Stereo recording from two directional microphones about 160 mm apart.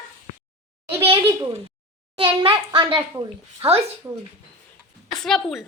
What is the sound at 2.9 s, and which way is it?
Speech, 20° right (ahead or behind).